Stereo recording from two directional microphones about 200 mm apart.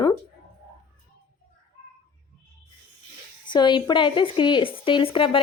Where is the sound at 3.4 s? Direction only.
20° left (ahead or behind).